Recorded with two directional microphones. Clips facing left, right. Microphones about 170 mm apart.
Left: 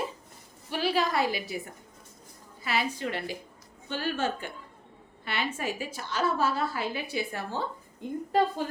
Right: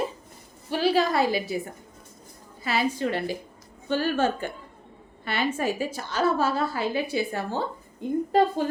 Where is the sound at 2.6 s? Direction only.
35° right (ahead or behind).